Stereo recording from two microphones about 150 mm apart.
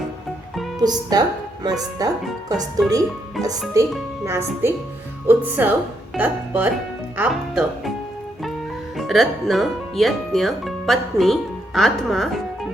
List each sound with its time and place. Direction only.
0.8 s speech: 25° right (ahead or behind); by 7.9 s 5° right (ahead or behind)
9.0 s speech: centre (ahead or behind)